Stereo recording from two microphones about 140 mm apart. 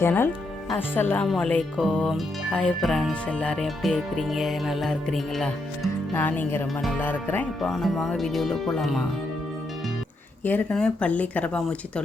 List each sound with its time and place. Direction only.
0.0 s speech: 15° left (ahead or behind); by 5.9 s centre (ahead or behind)
6.1 s speech: 15° left (ahead or behind)
7.7 s speech: centre (ahead or behind)
10.4 s speech: 10° left (ahead or behind)